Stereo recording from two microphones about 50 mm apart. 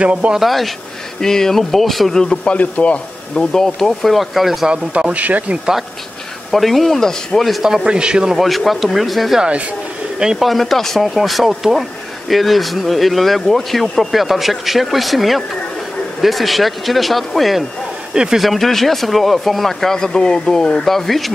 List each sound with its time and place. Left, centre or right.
0.0 s speech: right
0.3 s speech: centre
2.5 s speech: left
3.3 s speech: centre
4.6 s a man's voice: centre
5.1 s speech: right
6.5 s speech: centre
7.6 s a man's voice: centre
8.4 s speech: centre
10.1 s speech: centre
10.4 s speech: centre
18.1 s speech: centre
18.4 s speech: centre
20.8 s speech: centre